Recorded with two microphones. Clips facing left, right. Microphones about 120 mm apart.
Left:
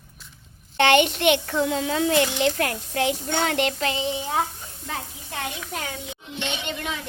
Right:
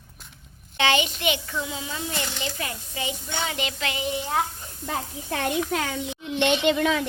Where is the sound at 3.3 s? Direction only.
60° left (ahead or behind).